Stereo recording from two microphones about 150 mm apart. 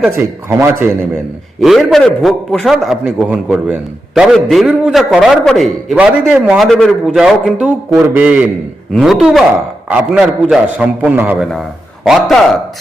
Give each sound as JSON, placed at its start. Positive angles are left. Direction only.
{"t": 0.1, "sound": "a man's voice", "side_deg": -15}
{"t": 1.6, "sound": "a man's voice", "side_deg": 0}